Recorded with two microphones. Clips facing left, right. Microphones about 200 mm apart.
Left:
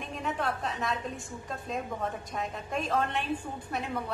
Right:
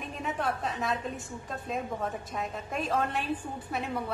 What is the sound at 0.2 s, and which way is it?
A woman's voice, centre (ahead or behind).